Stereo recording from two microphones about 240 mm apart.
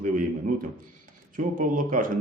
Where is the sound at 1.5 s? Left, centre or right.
Right.